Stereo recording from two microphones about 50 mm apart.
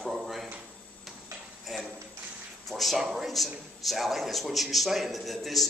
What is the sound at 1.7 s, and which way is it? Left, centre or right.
A man's voice, centre.